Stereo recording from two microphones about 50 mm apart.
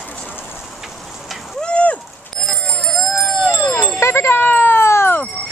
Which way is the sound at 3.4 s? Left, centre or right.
Left.